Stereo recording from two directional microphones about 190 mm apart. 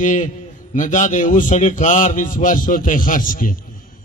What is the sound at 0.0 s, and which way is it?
A man's voice, 40° left (ahead or behind).